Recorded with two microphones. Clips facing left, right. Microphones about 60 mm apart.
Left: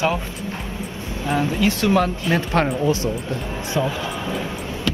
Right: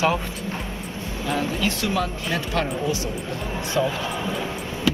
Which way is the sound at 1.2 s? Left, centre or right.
Centre.